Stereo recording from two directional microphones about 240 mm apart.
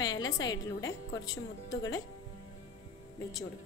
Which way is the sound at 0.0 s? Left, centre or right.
Centre.